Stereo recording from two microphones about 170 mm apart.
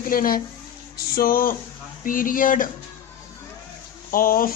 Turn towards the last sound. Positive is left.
turn(degrees=55)  # may be behind; listen again after turning